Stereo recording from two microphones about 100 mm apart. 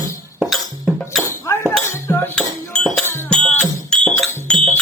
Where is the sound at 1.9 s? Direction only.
25° left (ahead or behind).